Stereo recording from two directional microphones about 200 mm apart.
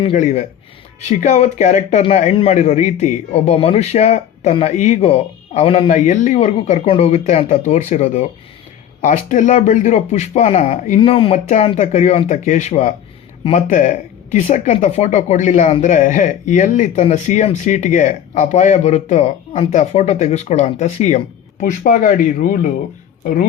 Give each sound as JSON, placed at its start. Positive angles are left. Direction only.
{"t": 0.0, "sound": "a woman's voice", "side_deg": 35}